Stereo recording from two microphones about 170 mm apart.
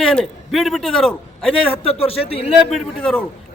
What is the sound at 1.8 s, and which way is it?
Speech, 35° left (ahead or behind).